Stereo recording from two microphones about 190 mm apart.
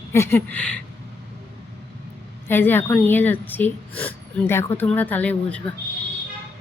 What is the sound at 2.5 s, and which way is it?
Speech, 10° left (ahead or behind).